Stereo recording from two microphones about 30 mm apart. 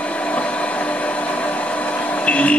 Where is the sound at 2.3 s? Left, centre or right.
Left.